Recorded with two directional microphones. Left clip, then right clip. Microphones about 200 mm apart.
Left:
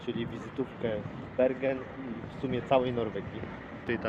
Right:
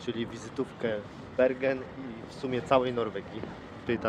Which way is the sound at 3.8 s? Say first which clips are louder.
Right 2 dB; 25° right (ahead or behind).